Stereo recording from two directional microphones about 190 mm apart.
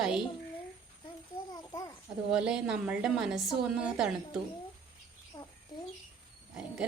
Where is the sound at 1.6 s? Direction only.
15° left (ahead or behind).